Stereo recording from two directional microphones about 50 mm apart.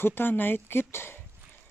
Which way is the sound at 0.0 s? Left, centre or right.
Left.